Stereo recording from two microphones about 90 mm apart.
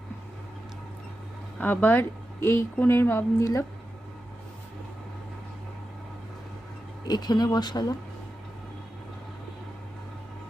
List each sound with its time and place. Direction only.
1.6 s speech: 20° left (ahead or behind)
7.1 s speech: 50° left (ahead or behind)